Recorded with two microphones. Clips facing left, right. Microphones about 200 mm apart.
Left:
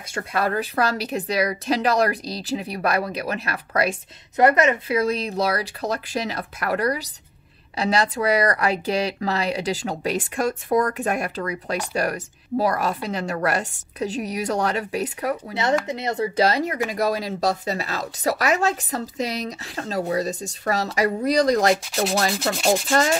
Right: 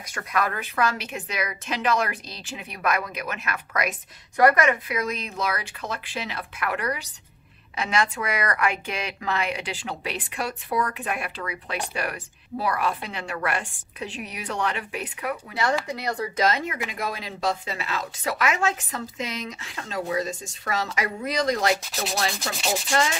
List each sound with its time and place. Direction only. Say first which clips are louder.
0.1 s a woman's voice: left 4 dB; 30° left (ahead or behind)
15.5 s a woman's voice: left 2 dB; 20° left (ahead or behind); by 21.7 s 35° left (ahead or behind)
22.4 s sanding: left 7 dB; 55° left (ahead or behind)